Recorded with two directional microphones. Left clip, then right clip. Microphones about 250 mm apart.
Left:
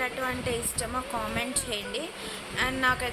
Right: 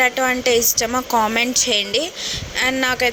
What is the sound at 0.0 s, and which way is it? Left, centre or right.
A woman's voice, right.